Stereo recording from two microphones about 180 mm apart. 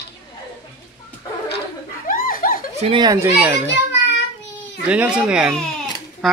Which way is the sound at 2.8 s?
25° right (ahead or behind).